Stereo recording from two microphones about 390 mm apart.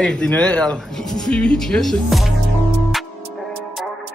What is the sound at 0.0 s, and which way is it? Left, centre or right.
Speech, centre.